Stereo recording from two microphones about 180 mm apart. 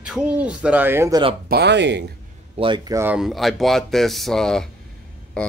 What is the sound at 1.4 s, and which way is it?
Speech, 65° right (ahead or behind).